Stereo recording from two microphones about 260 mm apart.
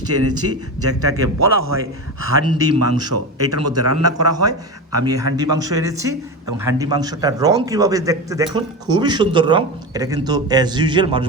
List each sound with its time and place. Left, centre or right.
0.1 s a man's voice: right
5.0 s speech: centre